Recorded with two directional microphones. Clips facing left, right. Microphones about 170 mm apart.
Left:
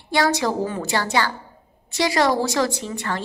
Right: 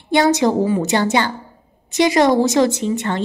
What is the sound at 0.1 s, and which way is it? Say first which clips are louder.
A woman's voice: right 6 dB; 20° right (ahead or behind).